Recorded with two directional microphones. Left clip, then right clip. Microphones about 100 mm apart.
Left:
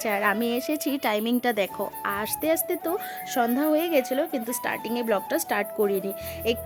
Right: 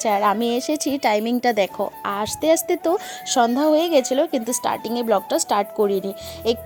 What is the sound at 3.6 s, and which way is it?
Speech, 35° right (ahead or behind).